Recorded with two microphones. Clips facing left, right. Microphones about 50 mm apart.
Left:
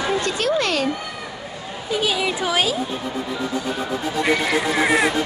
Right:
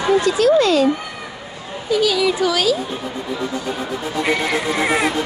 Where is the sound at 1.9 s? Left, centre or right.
Left.